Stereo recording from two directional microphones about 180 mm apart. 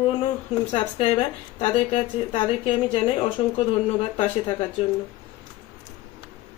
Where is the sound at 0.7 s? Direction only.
30° left (ahead or behind).